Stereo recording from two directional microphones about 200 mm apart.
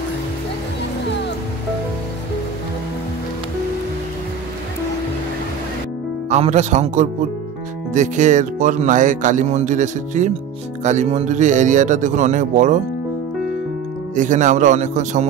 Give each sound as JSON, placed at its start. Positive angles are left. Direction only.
{"t": 6.2, "sound": "speech", "side_deg": -35}
{"t": 14.1, "sound": "speech", "side_deg": -40}